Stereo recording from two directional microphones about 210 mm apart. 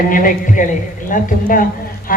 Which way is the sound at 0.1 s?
40° left (ahead or behind).